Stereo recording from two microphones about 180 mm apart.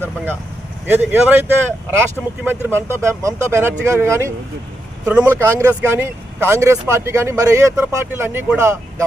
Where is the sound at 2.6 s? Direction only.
15° right (ahead or behind).